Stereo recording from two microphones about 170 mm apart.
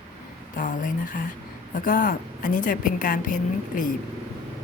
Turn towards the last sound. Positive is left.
turn(degrees=50)  # may be behind; listen again after turning